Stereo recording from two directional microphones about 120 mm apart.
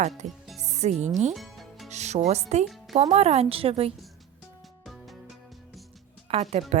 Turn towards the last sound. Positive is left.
turn(degrees=-60)  # may be behind; listen again after turning